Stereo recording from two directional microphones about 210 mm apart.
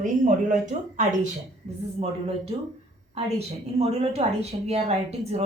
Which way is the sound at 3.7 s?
30° right (ahead or behind).